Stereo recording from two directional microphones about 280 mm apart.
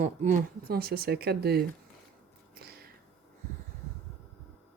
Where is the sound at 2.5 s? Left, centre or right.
Right.